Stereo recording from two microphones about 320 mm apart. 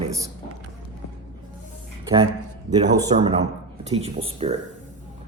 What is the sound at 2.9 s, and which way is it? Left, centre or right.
A man's voice, centre.